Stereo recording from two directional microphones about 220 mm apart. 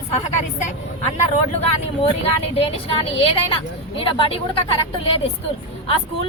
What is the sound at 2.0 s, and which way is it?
Speech, 25° left (ahead or behind).